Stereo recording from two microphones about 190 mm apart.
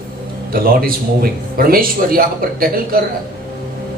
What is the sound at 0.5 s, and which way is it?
Speech, 50° right (ahead or behind).